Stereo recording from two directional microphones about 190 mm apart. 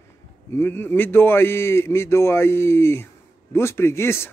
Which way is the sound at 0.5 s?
10° left (ahead or behind).